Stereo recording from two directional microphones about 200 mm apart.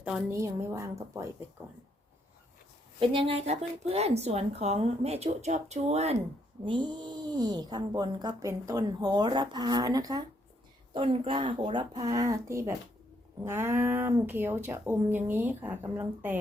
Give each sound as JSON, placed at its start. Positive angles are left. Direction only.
{"t": 0.0, "sound": "speech", "side_deg": -5}
{"t": 3.0, "sound": "speech", "side_deg": -25}